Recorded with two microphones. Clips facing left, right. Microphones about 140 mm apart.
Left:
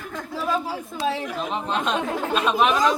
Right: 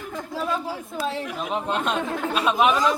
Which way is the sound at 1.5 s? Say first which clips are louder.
Even; 5° right (ahead or behind).